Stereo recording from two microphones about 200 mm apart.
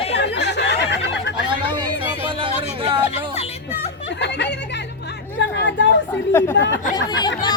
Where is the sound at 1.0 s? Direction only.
60° left (ahead or behind).